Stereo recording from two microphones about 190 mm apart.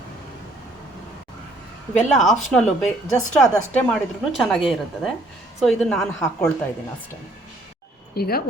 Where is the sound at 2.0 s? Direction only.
Centre (ahead or behind).